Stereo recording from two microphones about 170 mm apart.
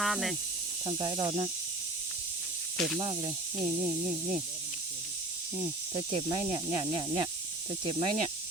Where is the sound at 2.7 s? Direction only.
Centre (ahead or behind).